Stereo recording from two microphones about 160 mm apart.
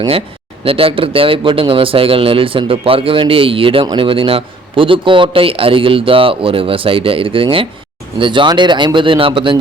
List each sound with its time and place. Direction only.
0.6 s a man's voice: 35° right (ahead or behind)